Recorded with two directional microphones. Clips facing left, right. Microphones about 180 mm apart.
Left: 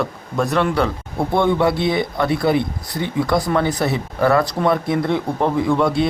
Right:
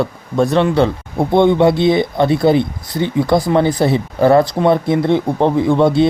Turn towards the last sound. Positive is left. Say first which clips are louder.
# right 5 dB
turn(degrees=-25)  # may be behind; listen again after turning